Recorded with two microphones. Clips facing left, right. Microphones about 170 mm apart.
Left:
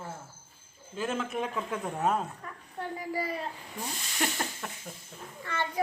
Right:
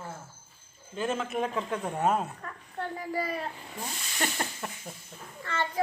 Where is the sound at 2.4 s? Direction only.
15° left (ahead or behind).